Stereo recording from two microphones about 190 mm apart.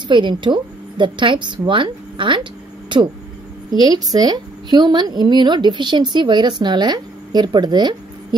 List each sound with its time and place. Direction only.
0.1 s a woman's voice: 25° right (ahead or behind)